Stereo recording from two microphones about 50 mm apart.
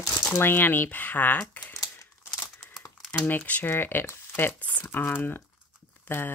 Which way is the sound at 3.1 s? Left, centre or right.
Left.